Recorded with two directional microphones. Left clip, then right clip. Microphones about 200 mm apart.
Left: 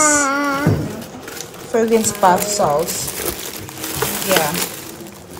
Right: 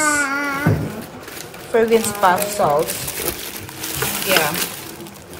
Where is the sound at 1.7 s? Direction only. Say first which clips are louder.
Even; centre (ahead or behind).